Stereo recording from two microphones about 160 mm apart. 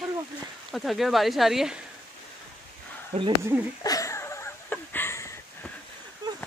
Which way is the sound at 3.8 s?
20° left (ahead or behind).